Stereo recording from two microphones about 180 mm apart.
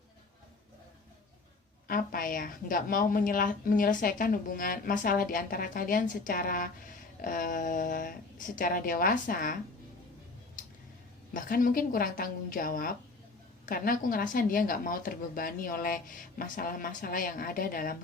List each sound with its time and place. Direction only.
1.9 s a woman's voice: 50° left (ahead or behind)
11.3 s a woman's voice: 50° left (ahead or behind)